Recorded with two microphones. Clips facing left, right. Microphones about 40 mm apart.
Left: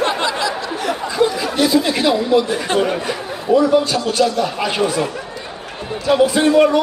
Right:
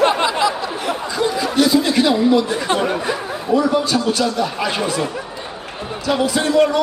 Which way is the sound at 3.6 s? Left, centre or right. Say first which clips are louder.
Left 2 dB; centre.